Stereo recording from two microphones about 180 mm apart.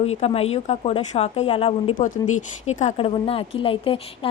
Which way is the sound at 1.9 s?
45° left (ahead or behind).